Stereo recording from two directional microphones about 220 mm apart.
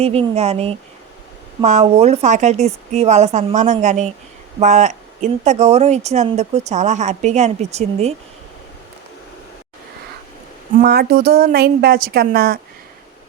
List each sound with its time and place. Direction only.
0.0 s speech: 25° right (ahead or behind)
10.8 s speech: 45° right (ahead or behind)